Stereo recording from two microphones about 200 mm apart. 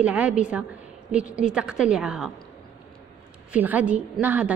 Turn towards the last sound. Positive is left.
turn(degrees=-10)  # may be behind; listen again after turning